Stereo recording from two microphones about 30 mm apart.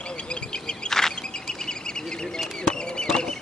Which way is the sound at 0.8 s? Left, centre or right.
Centre.